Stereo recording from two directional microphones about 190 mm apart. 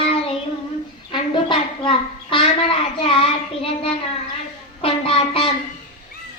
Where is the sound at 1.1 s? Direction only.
25° left (ahead or behind).